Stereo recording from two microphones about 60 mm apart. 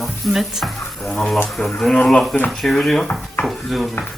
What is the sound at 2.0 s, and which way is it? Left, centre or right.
Speech, centre.